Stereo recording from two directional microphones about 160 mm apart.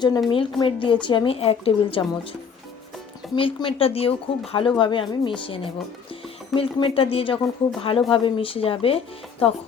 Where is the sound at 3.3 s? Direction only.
30° left (ahead or behind).